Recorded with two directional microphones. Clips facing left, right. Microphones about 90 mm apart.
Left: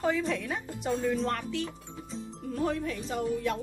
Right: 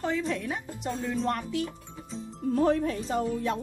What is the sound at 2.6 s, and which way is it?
Speech, 40° right (ahead or behind).